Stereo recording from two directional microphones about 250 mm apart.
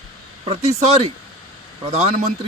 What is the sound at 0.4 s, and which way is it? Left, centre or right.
Speech, right.